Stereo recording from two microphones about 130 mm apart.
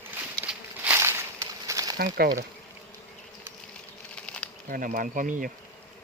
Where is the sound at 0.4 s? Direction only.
10° right (ahead or behind); by 2.4 s 30° right (ahead or behind).